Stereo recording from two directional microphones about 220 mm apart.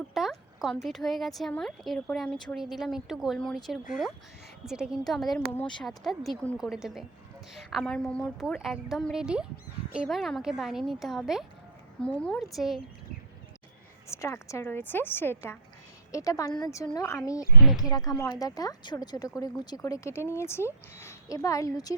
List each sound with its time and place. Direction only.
0.1 s speech: centre (ahead or behind)
14.1 s speech: 15° left (ahead or behind)